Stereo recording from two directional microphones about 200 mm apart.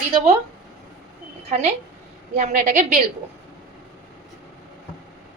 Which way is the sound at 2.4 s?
35° right (ahead or behind).